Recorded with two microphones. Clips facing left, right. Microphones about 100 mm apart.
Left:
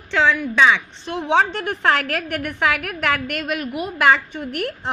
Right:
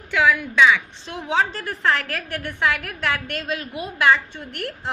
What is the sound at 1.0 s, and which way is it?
A woman's voice, 60° left (ahead or behind).